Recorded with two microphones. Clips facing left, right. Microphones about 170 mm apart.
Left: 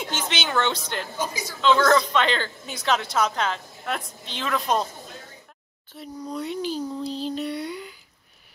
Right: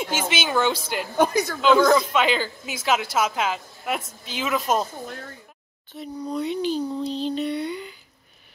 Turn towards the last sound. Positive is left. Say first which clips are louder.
# right 3 dB
turn(degrees=5)  # may be behind; listen again after turning